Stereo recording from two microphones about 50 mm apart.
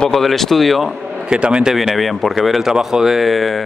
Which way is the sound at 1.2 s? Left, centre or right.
Centre.